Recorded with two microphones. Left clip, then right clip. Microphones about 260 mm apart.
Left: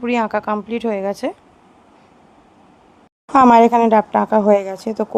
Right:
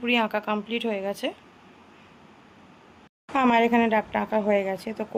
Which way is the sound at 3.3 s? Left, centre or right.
Left.